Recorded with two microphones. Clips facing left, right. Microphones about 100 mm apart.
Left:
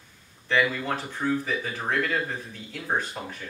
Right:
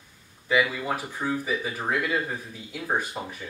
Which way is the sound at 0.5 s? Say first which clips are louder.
Even; 10° right (ahead or behind).